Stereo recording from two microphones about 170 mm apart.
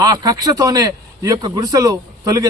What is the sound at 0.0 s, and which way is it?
A man's voice, 25° right (ahead or behind).